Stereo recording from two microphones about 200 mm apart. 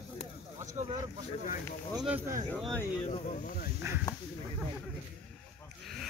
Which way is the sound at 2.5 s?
5° left (ahead or behind).